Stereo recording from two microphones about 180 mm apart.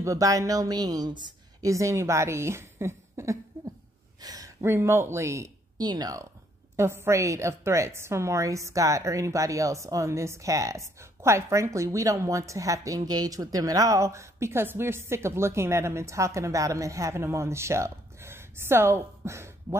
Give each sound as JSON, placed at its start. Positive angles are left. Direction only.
{"t": 0.0, "sound": "a woman's voice", "side_deg": -20}